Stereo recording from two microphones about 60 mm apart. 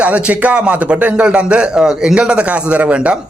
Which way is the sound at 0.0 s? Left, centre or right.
Right.